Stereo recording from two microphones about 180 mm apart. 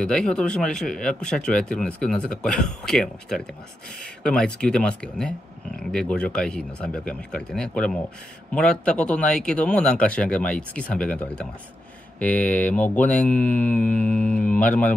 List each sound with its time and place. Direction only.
0.0 s speech: 5° left (ahead or behind)